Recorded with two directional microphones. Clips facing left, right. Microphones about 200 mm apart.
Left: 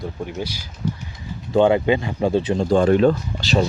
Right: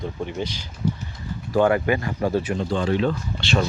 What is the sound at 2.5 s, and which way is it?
Speech, 50° left (ahead or behind).